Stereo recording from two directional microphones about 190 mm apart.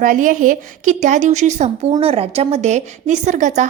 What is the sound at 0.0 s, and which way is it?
A woman's voice, 45° right (ahead or behind).